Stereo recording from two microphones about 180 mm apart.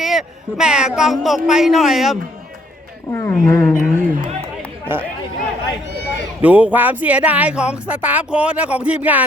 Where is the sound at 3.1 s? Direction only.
15° left (ahead or behind).